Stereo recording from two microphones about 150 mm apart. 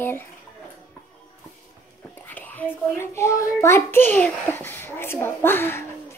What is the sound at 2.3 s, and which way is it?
A child's voice, 10° left (ahead or behind).